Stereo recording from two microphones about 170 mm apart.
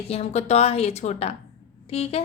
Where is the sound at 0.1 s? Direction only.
40° left (ahead or behind).